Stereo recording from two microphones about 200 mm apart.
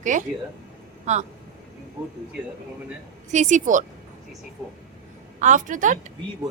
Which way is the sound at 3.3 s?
35° right (ahead or behind).